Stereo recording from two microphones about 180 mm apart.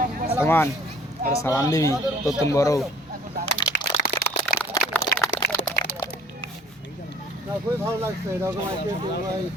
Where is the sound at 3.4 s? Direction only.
55° right (ahead or behind).